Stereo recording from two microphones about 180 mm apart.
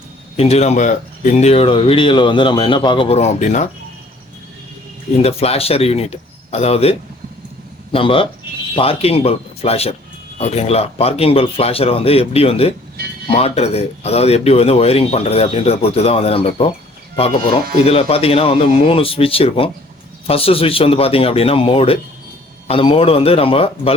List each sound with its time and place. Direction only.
0.3 s speech: 35° left (ahead or behind)
5.1 s speech: 35° left (ahead or behind)
7.9 s speech: 30° left (ahead or behind)